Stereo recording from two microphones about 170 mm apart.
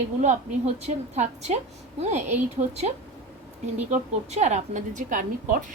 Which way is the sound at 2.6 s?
40° right (ahead or behind).